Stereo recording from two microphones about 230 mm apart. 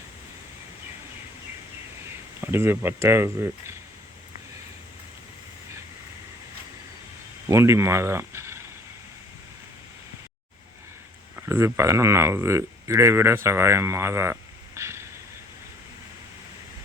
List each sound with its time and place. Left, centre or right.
2.4 s speech: centre
7.4 s speech: centre
11.3 s speech: centre
14.8 s a sound: centre